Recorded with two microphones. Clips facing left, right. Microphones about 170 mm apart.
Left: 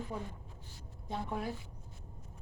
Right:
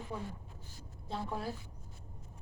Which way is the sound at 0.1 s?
15° left (ahead or behind).